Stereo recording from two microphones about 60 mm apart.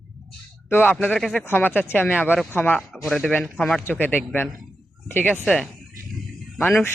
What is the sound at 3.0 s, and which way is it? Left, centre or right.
Speech, centre.